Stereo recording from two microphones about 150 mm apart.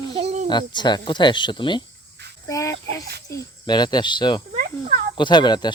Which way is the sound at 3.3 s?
25° left (ahead or behind).